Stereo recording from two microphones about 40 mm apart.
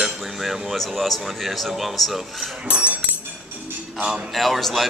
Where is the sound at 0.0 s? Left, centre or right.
Centre.